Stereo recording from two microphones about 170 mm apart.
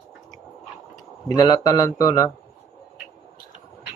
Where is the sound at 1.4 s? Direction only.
20° left (ahead or behind).